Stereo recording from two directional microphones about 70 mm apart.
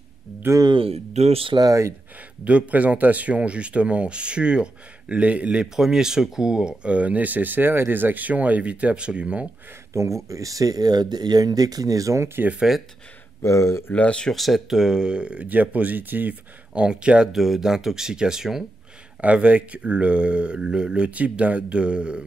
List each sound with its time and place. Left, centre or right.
0.5 s speech: right
1.5 s speech: right
2.4 s speech: centre
9.9 s speech: right
12.4 s speech: centre
13.4 s speech: left
13.9 s speech: centre
14.3 s speech: centre
19.2 s speech: centre